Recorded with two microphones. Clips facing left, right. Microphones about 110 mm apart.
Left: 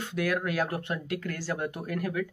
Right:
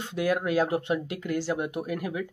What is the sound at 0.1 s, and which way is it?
Speech, 20° right (ahead or behind).